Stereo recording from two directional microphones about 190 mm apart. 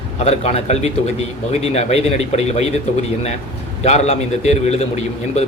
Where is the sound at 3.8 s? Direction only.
35° left (ahead or behind).